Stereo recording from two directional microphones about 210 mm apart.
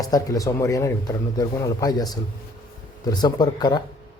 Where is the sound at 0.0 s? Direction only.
15° left (ahead or behind).